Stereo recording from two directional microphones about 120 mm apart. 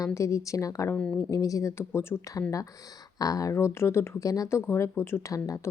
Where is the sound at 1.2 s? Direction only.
25° left (ahead or behind).